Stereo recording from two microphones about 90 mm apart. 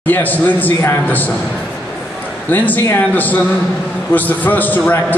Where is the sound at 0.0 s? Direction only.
20° left (ahead or behind).